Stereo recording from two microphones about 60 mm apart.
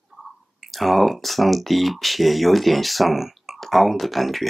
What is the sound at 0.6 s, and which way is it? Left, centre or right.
Speech, centre.